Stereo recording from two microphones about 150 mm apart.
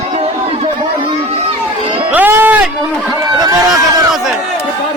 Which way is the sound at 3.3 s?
25° right (ahead or behind).